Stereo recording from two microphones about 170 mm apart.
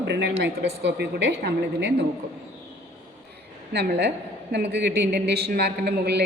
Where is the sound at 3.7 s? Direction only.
75° right (ahead or behind).